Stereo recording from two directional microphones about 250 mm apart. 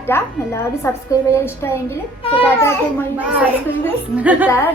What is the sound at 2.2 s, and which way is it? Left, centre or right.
Speech, left.